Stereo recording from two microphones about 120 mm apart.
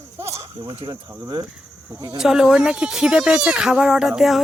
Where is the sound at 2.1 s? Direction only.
5° right (ahead or behind).